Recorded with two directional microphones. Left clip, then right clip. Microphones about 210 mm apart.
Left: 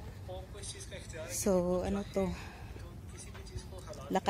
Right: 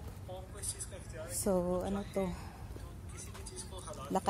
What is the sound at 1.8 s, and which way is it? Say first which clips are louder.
Speech: left 2 dB; 20° left (ahead or behind).